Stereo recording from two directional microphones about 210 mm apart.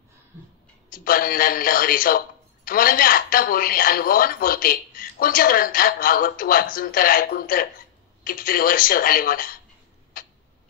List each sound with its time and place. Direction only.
0.9 s a man's voice: 45° left (ahead or behind)
10.1 s tick-tock: 40° left (ahead or behind)